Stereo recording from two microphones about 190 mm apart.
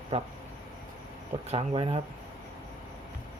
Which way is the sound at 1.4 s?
30° right (ahead or behind).